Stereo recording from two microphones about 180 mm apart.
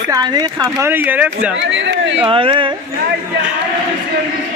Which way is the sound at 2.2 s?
30° right (ahead or behind).